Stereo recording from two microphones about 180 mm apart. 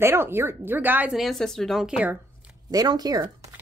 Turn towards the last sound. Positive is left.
turn(degrees=-20)  # may be behind; listen again after turning